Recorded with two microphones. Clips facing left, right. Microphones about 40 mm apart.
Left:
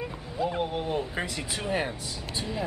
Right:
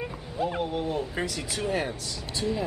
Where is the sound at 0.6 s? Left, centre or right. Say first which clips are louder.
Even; centre.